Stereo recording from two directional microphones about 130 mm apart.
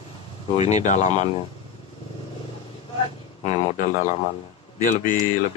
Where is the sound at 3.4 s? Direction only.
60° left (ahead or behind).